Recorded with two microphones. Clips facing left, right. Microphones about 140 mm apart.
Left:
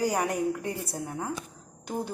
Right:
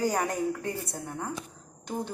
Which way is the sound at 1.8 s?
10° left (ahead or behind).